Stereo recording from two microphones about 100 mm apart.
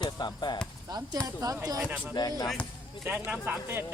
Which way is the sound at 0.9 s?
40° right (ahead or behind).